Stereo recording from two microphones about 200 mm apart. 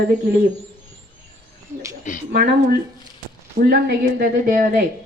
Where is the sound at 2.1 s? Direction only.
35° left (ahead or behind).